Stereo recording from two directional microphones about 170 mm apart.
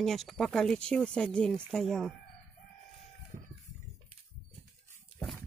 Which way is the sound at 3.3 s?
50° right (ahead or behind).